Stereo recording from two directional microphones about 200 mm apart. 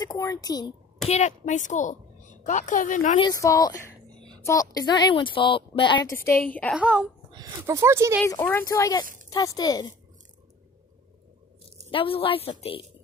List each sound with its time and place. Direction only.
0.0 s a woman's voice: 20° left (ahead or behind)
1.0 s a woman's voice: 35° left (ahead or behind)
3.2 s a woman's voice: 20° left (ahead or behind)
6.2 s a woman's voice: 45° left (ahead or behind)
6.5 s speech: 5° left (ahead or behind)
6.8 s speech: 5° right (ahead or behind)
8.3 s a woman's voice: 10° left (ahead or behind)
11.9 s a woman's voice: 25° left (ahead or behind)